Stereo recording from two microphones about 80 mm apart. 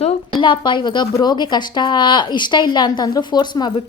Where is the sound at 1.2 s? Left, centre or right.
Left.